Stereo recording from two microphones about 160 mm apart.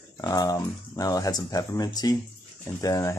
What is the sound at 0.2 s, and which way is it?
Speech, 20° left (ahead or behind).